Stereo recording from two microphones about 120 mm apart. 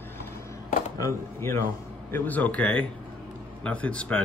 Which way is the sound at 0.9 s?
25° left (ahead or behind).